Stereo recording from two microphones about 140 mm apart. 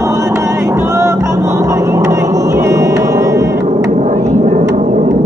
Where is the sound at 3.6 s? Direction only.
50° right (ahead or behind).